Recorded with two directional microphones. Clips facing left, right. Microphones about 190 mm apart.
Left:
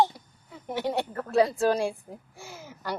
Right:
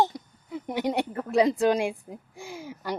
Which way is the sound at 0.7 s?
15° right (ahead or behind).